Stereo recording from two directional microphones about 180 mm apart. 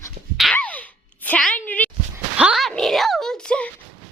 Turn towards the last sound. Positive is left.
turn(degrees=5)  # may be behind; listen again after turning